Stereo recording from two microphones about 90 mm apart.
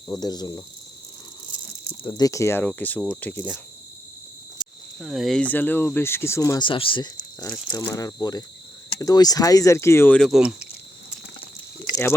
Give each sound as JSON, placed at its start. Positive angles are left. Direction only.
{"t": 0.2, "sound": "speech", "side_deg": 50}
{"t": 2.0, "sound": "speech", "side_deg": 45}
{"t": 2.6, "sound": "speech", "side_deg": 20}
{"t": 4.9, "sound": "speech", "side_deg": 0}
{"t": 5.4, "sound": "speech", "side_deg": 20}
{"t": 6.6, "sound": "speech", "side_deg": 70}
{"t": 7.3, "sound": "speech", "side_deg": 25}
{"t": 7.7, "sound": "speech", "side_deg": 40}
{"t": 10.2, "sound": "speech", "side_deg": -5}